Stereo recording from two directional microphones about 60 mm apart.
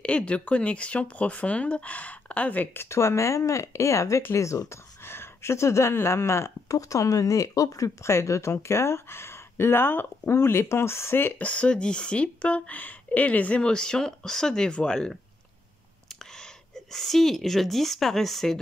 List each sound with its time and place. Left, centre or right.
0.0 s speech: centre; by 4.7 s left
5.0 s speech: left
6.8 s speech: left
11.3 s a woman's voice: left; by 18.6 s centre